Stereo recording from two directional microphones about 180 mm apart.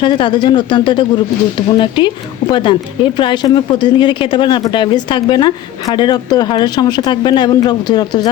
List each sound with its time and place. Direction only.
0.0 s speech: 25° left (ahead or behind)